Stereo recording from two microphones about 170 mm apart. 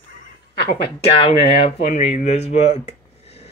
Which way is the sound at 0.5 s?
75° left (ahead or behind).